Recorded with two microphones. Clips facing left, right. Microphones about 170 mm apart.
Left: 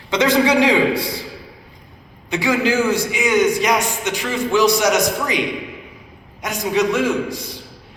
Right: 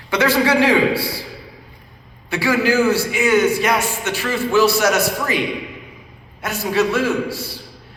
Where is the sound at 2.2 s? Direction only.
20° left (ahead or behind).